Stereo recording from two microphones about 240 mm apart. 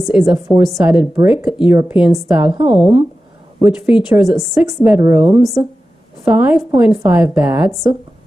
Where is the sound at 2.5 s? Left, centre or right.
Right.